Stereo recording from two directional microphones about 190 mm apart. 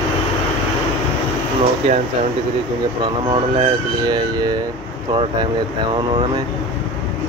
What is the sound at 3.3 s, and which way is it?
Speech, 25° right (ahead or behind).